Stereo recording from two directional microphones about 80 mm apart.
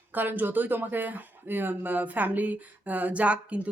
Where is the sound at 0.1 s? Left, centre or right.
Right.